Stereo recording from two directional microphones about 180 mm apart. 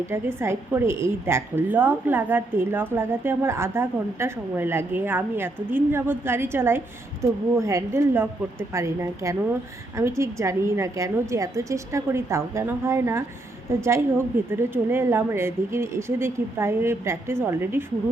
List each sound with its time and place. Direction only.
0.1 s a woman's voice: 15° right (ahead or behind)